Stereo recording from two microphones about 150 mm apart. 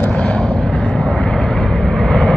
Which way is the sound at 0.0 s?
5° left (ahead or behind).